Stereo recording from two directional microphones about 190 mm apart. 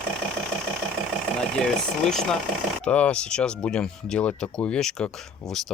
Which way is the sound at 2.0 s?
Centre (ahead or behind).